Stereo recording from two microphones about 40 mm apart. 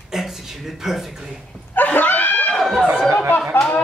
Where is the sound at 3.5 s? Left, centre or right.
Left.